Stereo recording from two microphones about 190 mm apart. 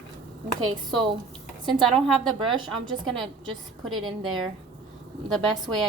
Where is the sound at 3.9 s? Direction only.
25° right (ahead or behind).